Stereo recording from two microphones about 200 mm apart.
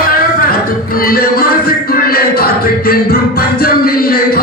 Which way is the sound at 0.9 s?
50° left (ahead or behind).